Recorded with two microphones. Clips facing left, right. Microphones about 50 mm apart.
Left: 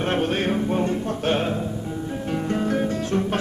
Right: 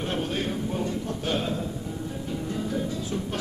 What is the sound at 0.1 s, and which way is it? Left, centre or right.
Music, left.